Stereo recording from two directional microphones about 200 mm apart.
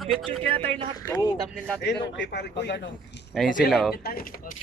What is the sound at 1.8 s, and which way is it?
A man's voice, 60° left (ahead or behind).